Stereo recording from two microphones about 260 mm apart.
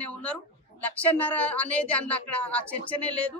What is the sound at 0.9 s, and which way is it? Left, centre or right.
A woman's voice, centre.